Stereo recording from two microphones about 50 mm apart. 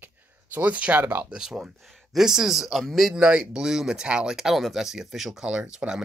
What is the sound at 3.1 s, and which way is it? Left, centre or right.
Speech, centre.